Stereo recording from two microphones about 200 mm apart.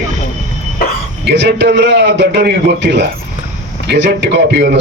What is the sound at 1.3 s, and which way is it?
A man's voice, 60° right (ahead or behind).